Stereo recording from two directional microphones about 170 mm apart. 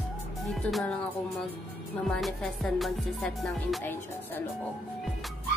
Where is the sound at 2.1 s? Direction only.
Centre (ahead or behind).